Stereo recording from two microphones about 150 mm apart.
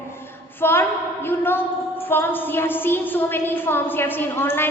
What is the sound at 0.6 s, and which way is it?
A woman's voice, 15° left (ahead or behind).